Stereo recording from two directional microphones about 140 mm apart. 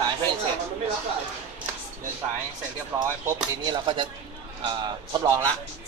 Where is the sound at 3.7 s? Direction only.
30° right (ahead or behind).